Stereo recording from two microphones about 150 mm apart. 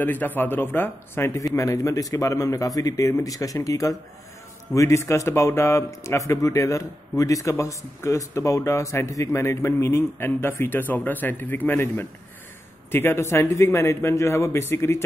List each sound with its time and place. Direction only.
0.0 s a man's voice: 10° left (ahead or behind)